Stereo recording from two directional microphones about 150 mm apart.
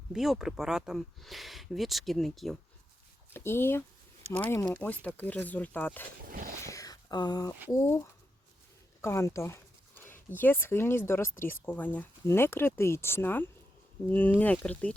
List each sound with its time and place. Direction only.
0.1 s speech: 5° right (ahead or behind)
3.3 s speech: 15° left (ahead or behind)
6.2 s a sound: 65° right (ahead or behind)
6.7 s speech: 25° left (ahead or behind)